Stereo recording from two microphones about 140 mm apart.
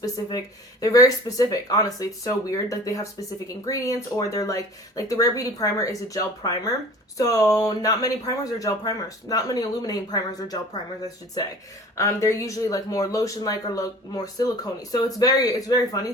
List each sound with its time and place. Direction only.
0.0 s speech: 25° left (ahead or behind)
11.9 s speech: 20° left (ahead or behind)